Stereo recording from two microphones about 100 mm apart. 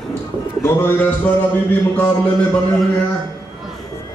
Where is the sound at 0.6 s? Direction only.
15° left (ahead or behind).